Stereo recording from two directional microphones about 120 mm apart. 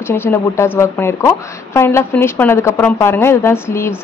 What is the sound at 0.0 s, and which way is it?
A woman's voice, 20° left (ahead or behind).